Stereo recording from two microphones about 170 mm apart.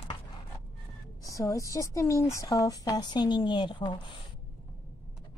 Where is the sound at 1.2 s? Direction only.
20° left (ahead or behind).